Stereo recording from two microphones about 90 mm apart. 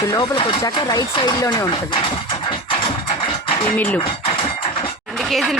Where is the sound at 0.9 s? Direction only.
45° left (ahead or behind).